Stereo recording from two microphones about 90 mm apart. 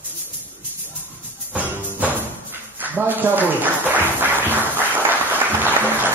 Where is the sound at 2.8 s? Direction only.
20° right (ahead or behind).